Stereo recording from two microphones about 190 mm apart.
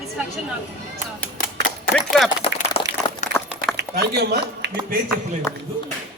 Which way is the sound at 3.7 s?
55° right (ahead or behind).